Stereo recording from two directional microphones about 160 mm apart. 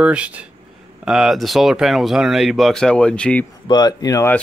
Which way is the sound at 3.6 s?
25° left (ahead or behind).